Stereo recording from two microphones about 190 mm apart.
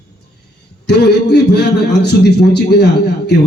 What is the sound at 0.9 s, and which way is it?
A man's voice, 60° left (ahead or behind).